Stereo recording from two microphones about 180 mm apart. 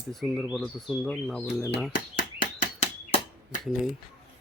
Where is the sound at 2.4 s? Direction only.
40° left (ahead or behind).